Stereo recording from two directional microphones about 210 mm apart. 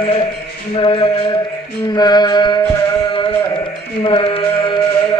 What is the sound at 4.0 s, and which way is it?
Sheep, 25° left (ahead or behind).